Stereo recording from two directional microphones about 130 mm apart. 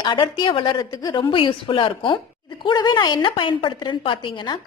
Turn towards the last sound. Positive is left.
turn(degrees=35)  # may be behind; listen again after turning